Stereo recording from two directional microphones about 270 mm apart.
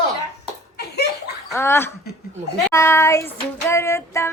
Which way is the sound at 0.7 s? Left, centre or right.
Left.